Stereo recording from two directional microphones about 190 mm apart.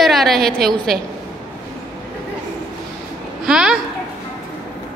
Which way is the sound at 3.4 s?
5° right (ahead or behind).